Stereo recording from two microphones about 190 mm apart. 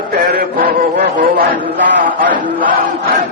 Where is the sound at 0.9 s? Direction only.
60° right (ahead or behind).